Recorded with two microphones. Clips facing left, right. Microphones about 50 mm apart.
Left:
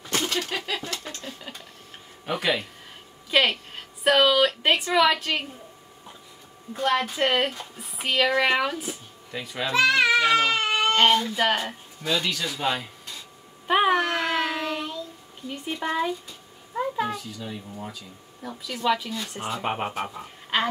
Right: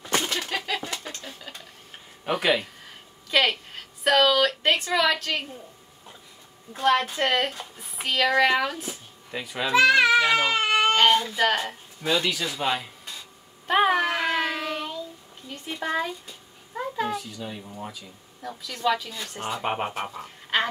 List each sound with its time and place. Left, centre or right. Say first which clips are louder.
0.1 s a sound: even; centre
2.2 s speech: right 2 dB; centre
3.3 s a woman's voice: left 1 dB; centre
6.7 s speech: right 2 dB; centre
9.3 s baby cry: right 3 dB; centre
11.0 s speech: even; centre
12.0 s a man's voice: right 1 dB; centre
13.7 s child singing: even; centre
15.5 s speech: even; centre
18.4 s speech: right 1 dB; centre
19.4 s speech: right 1 dB; centre